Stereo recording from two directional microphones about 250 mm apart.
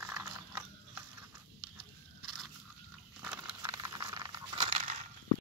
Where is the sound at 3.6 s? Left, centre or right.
Centre.